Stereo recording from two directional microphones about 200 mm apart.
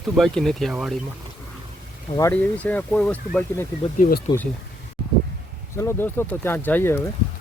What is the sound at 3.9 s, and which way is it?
Speech, 45° left (ahead or behind).